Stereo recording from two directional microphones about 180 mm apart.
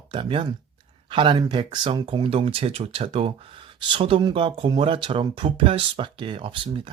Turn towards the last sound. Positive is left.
turn(degrees=-30)  # may be behind; listen again after turning